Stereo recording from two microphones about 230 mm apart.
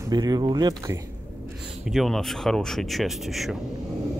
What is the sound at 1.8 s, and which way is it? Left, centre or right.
Speech, centre.